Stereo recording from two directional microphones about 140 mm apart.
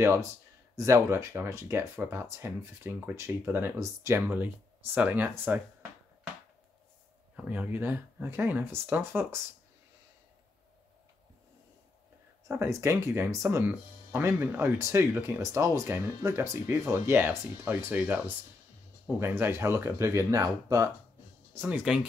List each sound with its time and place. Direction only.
0.0 s speech: 20° right (ahead or behind)
7.3 s speech: 10° right (ahead or behind)
12.4 s speech: 20° right (ahead or behind)
21.5 s speech: 10° right (ahead or behind)